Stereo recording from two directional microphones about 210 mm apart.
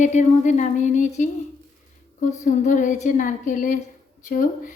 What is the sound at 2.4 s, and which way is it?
A woman's voice, 35° left (ahead or behind).